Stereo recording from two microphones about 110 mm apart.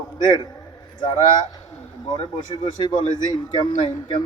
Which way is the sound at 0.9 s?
40° left (ahead or behind).